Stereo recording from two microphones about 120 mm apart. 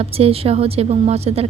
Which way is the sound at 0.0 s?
55° right (ahead or behind).